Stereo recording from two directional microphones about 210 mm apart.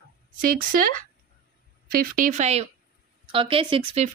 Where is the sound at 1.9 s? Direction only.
40° right (ahead or behind); by 4.0 s 25° right (ahead or behind).